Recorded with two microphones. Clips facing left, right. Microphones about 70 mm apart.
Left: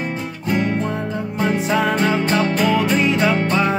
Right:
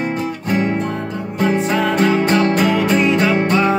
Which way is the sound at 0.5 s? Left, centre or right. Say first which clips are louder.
Right 1 dB; right.